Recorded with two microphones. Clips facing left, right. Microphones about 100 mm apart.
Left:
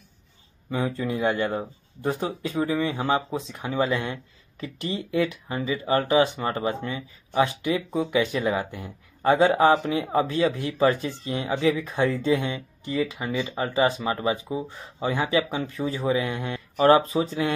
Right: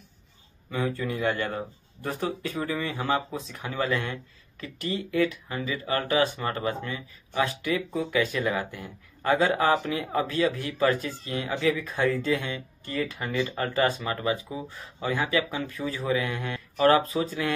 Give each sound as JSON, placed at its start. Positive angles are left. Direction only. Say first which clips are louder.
{"t": 0.7, "sound": "speech", "louder": "left 2 dB", "side_deg": 20}